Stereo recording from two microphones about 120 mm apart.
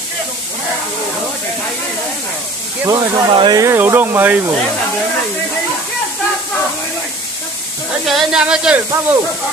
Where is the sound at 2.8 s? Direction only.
35° right (ahead or behind).